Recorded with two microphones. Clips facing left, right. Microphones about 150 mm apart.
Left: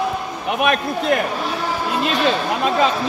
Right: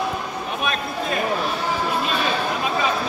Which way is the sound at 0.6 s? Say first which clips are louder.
Left 8 dB; 70° left (ahead or behind).